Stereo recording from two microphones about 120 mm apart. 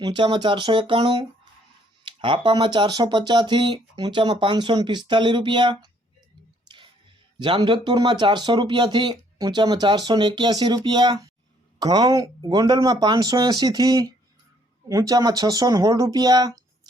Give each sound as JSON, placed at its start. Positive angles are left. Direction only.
{"t": 0.0, "sound": "speech", "side_deg": -40}
{"t": 6.7, "sound": "music", "side_deg": -40}
{"t": 7.3, "sound": "speech", "side_deg": -40}